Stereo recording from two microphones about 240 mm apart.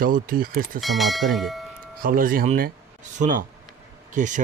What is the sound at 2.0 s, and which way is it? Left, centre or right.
Speech, right.